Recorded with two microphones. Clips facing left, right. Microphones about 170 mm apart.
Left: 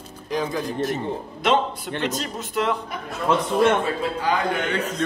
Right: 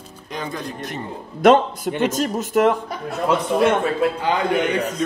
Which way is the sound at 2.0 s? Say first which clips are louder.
Right 7 dB; 45° right (ahead or behind).